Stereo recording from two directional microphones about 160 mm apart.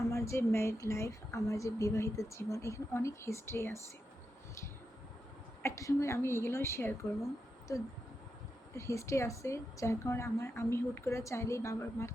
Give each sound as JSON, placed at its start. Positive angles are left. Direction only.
{"t": 0.0, "sound": "a woman's voice", "side_deg": 20}
{"t": 5.6, "sound": "a woman's voice", "side_deg": 20}
{"t": 8.7, "sound": "a woman's voice", "side_deg": 20}